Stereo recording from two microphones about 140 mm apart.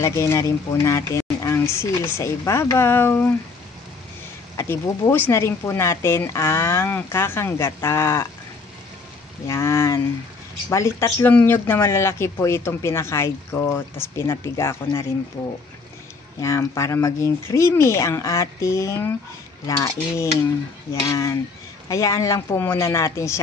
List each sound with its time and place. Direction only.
0.0 s speech: 20° left (ahead or behind)
4.6 s speech: 20° left (ahead or behind)
9.5 s speech: 20° left (ahead or behind)
16.3 s speech: 20° left (ahead or behind)